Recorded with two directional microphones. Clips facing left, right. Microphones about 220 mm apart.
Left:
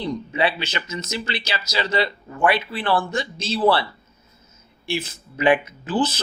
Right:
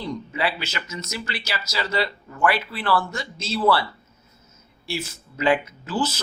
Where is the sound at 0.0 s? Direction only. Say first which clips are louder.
Left 4 dB; 20° left (ahead or behind).